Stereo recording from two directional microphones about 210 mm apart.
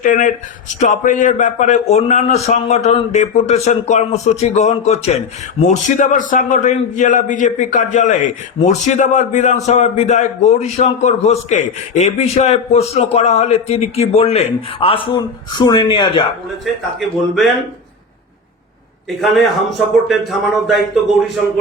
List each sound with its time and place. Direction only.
0.0 s a man's voice: 40° left (ahead or behind); by 16.2 s 20° left (ahead or behind)
17.0 s speech: centre (ahead or behind)
19.0 s speech: centre (ahead or behind)